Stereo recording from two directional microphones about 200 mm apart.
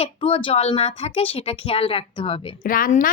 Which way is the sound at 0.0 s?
25° left (ahead or behind).